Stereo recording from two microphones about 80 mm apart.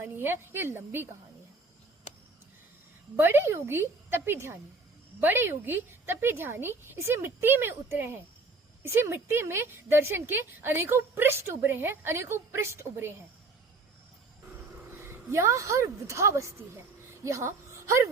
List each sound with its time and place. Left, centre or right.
0.0 s a woman's voice: right
3.2 s a woman's voice: right
15.0 s a woman's voice: right
17.2 s a sound: right